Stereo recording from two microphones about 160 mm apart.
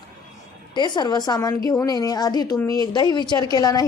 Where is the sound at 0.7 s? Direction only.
30° left (ahead or behind).